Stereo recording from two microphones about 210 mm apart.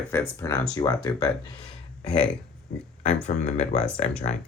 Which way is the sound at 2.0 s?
5° left (ahead or behind).